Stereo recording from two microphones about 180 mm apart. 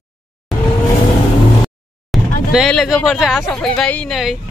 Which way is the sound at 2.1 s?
Centre (ahead or behind).